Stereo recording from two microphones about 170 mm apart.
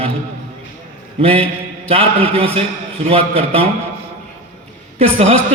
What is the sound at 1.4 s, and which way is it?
A man's voice, 35° right (ahead or behind).